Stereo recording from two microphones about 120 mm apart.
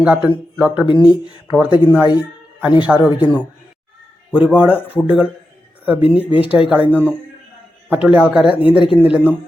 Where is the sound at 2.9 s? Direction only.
5° right (ahead or behind).